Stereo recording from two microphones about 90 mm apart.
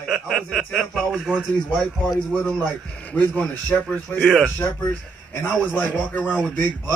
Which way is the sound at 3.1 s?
20° left (ahead or behind).